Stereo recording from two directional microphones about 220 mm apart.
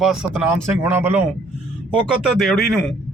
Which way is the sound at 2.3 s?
Centre (ahead or behind).